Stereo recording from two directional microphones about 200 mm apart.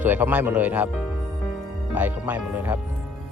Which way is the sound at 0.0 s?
10° right (ahead or behind).